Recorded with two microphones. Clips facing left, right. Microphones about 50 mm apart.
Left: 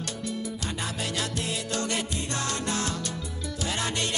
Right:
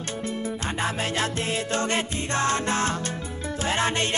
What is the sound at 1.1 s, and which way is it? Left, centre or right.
Music, right.